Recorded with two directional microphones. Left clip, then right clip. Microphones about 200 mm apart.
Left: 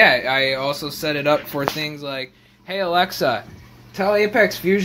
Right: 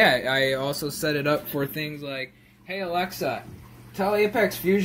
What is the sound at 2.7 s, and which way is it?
Speech, 35° left (ahead or behind).